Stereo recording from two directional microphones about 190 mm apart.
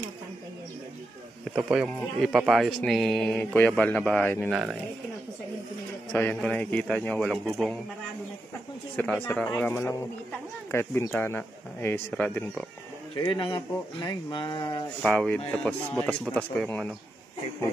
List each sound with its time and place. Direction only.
1.4 s speech: 5° right (ahead or behind)
4.5 s speech: 5° right (ahead or behind)
6.1 s speech: 5° left (ahead or behind)
8.9 s speech: 10° left (ahead or behind)
13.1 s speech: 25° left (ahead or behind)
15.0 s speech: 5° left (ahead or behind)